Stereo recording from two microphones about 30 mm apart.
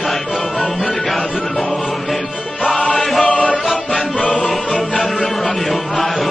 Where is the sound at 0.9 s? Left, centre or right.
Centre.